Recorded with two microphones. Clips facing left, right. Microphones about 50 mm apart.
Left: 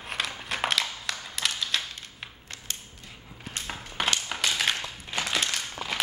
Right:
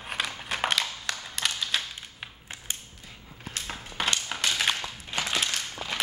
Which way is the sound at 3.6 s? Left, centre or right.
Centre.